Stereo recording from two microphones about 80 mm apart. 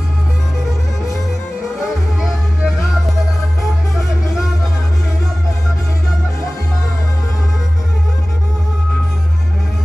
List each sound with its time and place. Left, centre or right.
2.2 s music: centre